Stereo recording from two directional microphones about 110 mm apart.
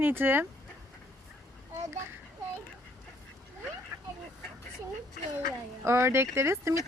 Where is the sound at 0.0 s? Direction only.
20° right (ahead or behind).